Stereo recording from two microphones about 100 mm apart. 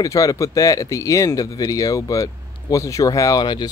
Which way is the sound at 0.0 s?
35° left (ahead or behind).